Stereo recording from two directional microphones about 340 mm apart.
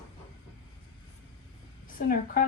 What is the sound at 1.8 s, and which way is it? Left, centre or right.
Speech, left.